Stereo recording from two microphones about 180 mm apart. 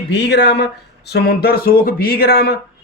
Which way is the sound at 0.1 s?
70° left (ahead or behind).